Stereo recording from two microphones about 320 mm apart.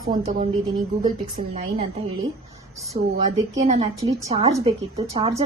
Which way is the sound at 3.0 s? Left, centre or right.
Right.